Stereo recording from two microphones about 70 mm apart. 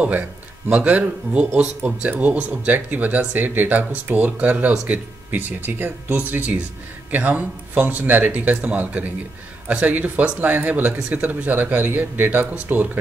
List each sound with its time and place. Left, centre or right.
0.0 s speech: right